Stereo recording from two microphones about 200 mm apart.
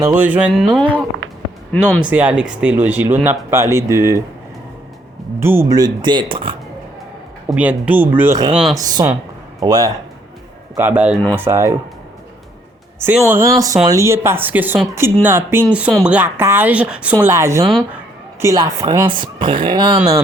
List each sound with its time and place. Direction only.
0.0 s speech: 10° right (ahead or behind)
2.0 s speech: 5° right (ahead or behind)
5.4 s speech: 10° right (ahead or behind)
7.5 s speech: 5° right (ahead or behind)
8.8 s speech: 20° right (ahead or behind)
10.8 s speech: 5° right (ahead or behind)
13.0 s speech: 10° right (ahead or behind)
17.7 s speech: centre (ahead or behind)
18.3 s speech: 15° right (ahead or behind)